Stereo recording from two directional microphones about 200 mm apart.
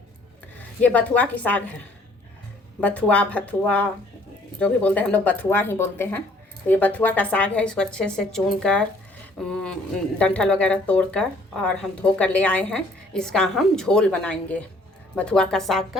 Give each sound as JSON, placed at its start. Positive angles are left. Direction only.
{"t": 0.8, "sound": "speech", "side_deg": 5}
{"t": 2.8, "sound": "a woman's voice", "side_deg": 5}
{"t": 10.2, "sound": "a woman's voice", "side_deg": 5}